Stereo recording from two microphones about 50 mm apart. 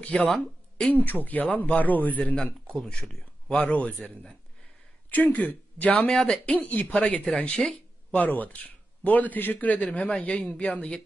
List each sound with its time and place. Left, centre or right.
0.1 s speech: left
0.8 s a man's voice: left
2.4 s speech: centre
3.5 s speech: left
5.9 s speech: centre
6.4 s a man's voice: left
9.8 s speech: centre